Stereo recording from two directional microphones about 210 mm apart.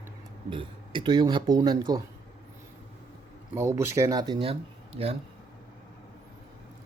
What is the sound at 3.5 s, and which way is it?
Speech, 15° right (ahead or behind).